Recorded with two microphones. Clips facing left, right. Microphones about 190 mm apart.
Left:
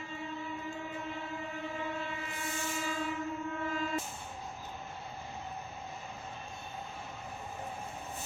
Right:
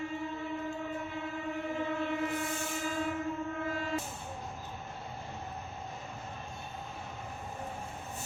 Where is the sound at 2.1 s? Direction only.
55° right (ahead or behind).